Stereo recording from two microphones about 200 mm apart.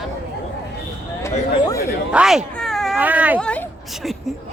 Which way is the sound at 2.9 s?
10° right (ahead or behind).